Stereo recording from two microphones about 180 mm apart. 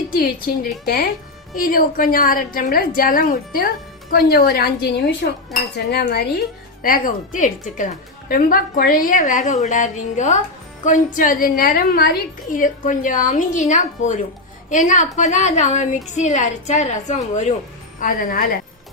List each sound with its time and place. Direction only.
0.9 s a woman's voice: 60° left (ahead or behind)
5.2 s cutlery: 70° left (ahead or behind)
5.7 s a woman's voice: 60° left (ahead or behind)
6.8 s a woman's voice: 50° left (ahead or behind)